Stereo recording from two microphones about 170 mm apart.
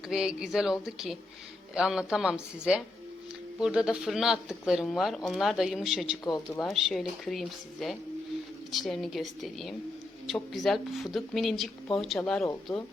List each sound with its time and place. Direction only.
0.1 s speech: 5° right (ahead or behind)